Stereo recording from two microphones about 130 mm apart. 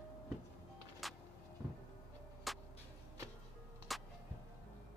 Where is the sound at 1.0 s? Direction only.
Centre (ahead or behind).